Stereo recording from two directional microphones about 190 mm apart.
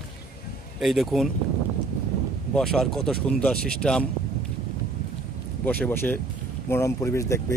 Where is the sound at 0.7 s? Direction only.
Centre (ahead or behind).